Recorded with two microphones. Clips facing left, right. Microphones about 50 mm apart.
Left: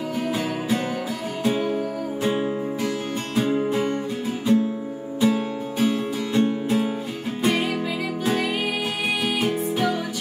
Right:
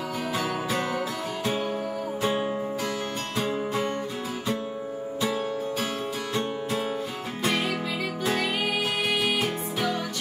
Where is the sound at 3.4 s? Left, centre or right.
Centre.